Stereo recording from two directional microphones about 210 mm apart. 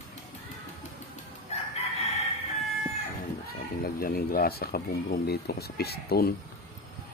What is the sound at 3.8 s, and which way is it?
Speech, 45° left (ahead or behind).